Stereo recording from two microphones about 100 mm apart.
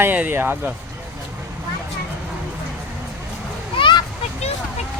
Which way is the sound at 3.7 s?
50° left (ahead or behind).